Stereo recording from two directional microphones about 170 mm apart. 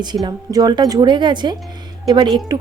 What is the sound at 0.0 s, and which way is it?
A woman's voice, 25° right (ahead or behind).